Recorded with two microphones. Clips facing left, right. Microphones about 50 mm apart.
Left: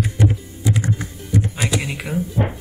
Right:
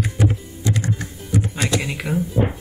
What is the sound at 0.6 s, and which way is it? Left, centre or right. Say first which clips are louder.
Music: left 2 dB; centre.